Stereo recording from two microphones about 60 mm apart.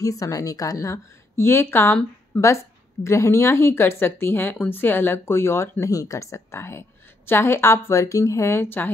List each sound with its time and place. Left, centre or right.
0.0 s a woman's voice: left
2.3 s a woman's voice: left
5.9 s a woman's voice: left